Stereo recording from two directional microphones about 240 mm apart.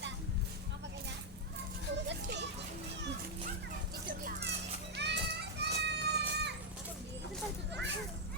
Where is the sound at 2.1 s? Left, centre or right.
Right.